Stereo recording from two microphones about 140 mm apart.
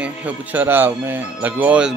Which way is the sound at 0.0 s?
10° right (ahead or behind).